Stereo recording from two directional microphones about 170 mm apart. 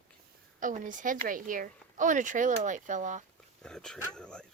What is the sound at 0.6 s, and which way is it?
Speech, 50° right (ahead or behind).